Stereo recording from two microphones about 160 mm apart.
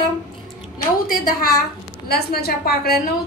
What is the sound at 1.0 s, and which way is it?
Speech, 65° left (ahead or behind).